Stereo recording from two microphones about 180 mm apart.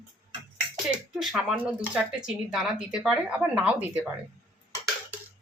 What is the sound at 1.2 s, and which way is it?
Speech, centre (ahead or behind).